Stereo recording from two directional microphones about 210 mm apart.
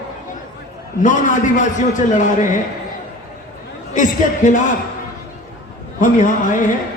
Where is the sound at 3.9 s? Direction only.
40° left (ahead or behind).